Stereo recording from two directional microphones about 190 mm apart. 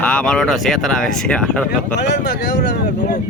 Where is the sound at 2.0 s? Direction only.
65° left (ahead or behind).